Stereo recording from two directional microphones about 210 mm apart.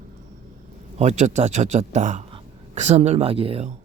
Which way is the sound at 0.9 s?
35° right (ahead or behind).